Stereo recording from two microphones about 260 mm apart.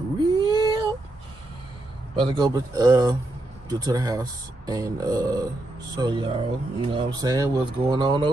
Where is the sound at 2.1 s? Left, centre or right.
Centre.